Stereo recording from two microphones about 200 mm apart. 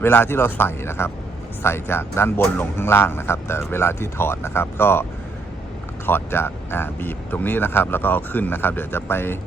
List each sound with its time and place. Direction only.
0.0 s speech: 10° left (ahead or behind)
6.1 s speech: 10° left (ahead or behind)